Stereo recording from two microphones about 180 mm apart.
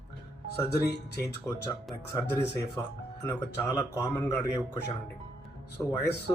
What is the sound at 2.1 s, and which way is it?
Speech, 15° left (ahead or behind).